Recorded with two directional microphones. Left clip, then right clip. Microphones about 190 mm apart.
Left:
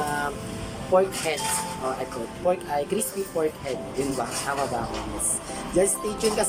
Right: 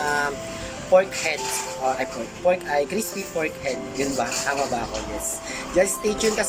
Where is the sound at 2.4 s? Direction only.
15° left (ahead or behind).